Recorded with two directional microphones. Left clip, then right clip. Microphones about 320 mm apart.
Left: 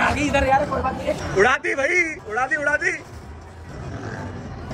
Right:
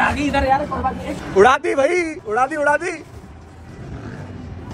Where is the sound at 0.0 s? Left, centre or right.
Centre.